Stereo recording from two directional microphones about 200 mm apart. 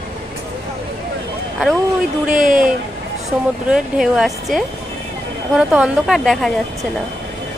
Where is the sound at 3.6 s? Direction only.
5° right (ahead or behind).